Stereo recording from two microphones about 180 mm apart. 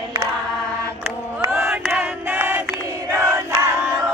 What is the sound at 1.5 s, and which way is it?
Battle cry, 5° right (ahead or behind).